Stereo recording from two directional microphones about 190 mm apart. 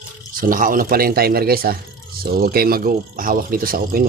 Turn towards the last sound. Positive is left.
turn(degrees=-50)  # may be behind; listen again after turning